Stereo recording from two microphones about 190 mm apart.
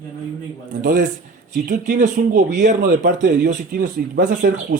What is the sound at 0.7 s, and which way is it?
Speech, 45° right (ahead or behind).